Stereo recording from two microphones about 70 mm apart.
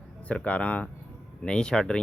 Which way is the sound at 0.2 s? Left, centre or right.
Centre.